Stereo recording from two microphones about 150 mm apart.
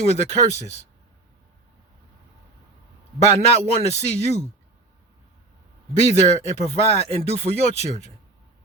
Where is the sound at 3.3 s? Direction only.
45° right (ahead or behind).